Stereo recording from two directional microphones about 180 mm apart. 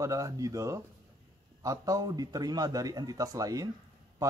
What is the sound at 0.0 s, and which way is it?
A man's voice, 20° right (ahead or behind).